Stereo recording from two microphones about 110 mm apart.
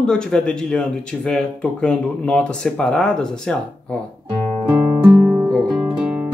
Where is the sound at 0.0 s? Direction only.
5° left (ahead or behind).